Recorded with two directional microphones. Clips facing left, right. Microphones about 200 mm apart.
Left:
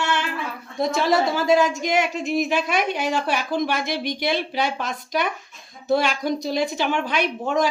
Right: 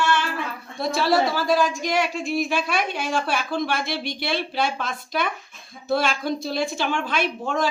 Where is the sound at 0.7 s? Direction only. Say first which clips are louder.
Left 1 dB; 15° left (ahead or behind).